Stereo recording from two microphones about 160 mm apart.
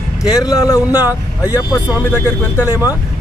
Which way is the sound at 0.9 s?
10° right (ahead or behind).